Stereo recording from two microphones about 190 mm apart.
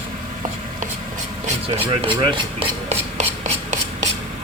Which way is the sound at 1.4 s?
30° right (ahead or behind).